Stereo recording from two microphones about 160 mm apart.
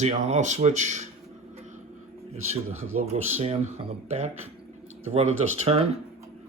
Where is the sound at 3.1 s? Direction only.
40° right (ahead or behind).